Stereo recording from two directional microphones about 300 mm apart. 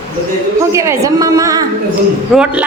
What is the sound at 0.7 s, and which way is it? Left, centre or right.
A woman's voice, centre.